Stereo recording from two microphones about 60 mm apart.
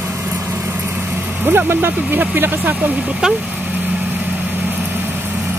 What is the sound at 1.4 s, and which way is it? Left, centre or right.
Speech, right.